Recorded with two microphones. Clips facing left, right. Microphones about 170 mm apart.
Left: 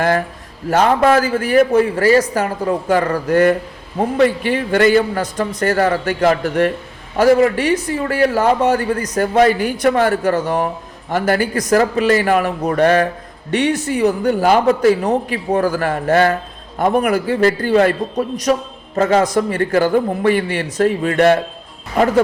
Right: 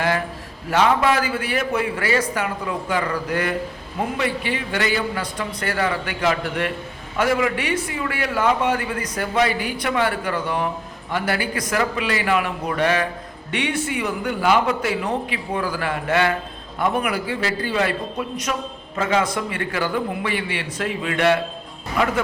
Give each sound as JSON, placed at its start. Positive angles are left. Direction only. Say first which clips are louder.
{"t": 0.7, "sound": "a man's voice", "louder": "left 5 dB", "side_deg": 45}